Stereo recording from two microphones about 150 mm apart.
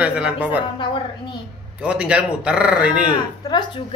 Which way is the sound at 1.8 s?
10° right (ahead or behind).